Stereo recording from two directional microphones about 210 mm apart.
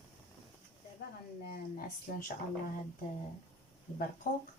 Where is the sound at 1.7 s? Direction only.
40° left (ahead or behind).